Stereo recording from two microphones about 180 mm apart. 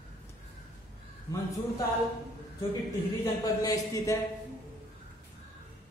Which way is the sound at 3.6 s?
20° left (ahead or behind).